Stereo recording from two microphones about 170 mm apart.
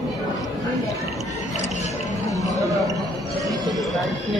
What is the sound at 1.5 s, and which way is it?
Music, 40° left (ahead or behind).